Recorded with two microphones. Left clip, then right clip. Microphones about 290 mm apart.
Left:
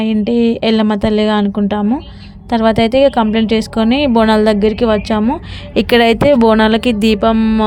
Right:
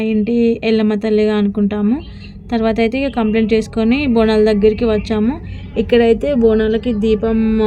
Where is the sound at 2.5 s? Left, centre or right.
Left.